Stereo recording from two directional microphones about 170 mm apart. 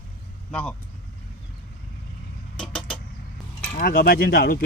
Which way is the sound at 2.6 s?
5° left (ahead or behind).